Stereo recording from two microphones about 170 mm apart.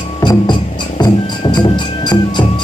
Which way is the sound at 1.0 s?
25° left (ahead or behind).